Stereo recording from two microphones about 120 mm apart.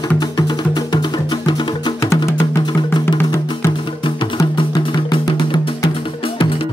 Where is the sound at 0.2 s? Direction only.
35° left (ahead or behind).